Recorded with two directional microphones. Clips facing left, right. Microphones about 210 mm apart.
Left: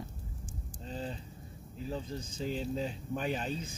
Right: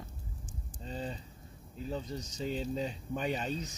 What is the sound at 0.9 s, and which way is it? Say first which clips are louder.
Speech: even; centre (ahead or behind).